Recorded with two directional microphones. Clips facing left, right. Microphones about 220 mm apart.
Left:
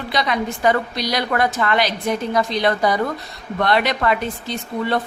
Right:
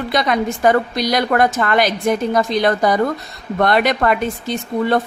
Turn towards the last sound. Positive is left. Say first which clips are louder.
# right 4 dB
turn(degrees=-45)  # may be behind; listen again after turning